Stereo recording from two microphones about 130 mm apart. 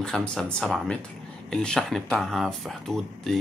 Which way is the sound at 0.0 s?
5° left (ahead or behind).